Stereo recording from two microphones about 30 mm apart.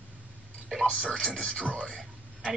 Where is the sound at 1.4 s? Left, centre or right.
Left.